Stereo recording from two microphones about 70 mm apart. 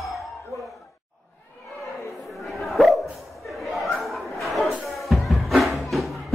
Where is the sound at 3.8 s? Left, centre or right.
Centre.